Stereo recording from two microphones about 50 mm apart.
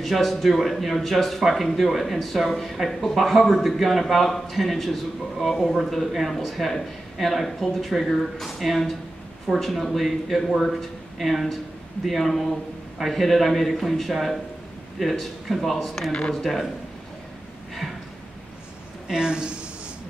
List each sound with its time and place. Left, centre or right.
0.0 s speech: centre
16.1 s speech: centre
19.0 s speech: centre